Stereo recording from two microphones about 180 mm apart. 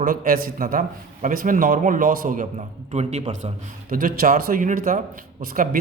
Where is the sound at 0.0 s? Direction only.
50° right (ahead or behind).